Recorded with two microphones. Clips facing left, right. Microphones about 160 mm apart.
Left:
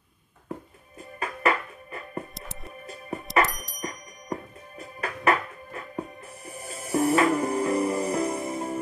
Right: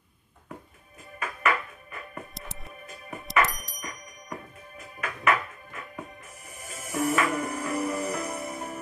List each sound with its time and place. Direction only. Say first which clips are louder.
1.2 s music: left 2 dB; 30° left (ahead or behind)
2.3 s music: left 2 dB; centre (ahead or behind)
3.8 s music: left 9 dB; 40° left (ahead or behind)